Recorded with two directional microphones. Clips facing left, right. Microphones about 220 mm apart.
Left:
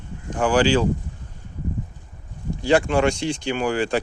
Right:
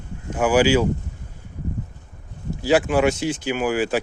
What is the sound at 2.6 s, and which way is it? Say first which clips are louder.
Speech: right 1 dB; 5° right (ahead or behind).